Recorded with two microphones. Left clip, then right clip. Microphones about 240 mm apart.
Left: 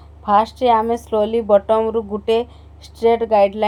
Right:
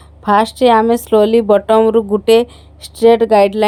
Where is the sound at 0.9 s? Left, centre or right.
Right.